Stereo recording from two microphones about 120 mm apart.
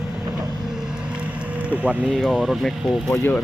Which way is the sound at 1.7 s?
10° right (ahead or behind).